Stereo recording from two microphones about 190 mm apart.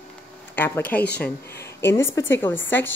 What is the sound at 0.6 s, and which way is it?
A woman's voice, 10° left (ahead or behind).